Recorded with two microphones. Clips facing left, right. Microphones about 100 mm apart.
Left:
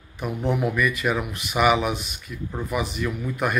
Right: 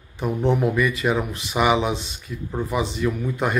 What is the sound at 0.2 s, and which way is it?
Speech, 30° right (ahead or behind).